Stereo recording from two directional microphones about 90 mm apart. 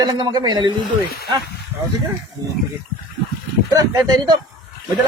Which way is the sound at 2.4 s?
45° right (ahead or behind).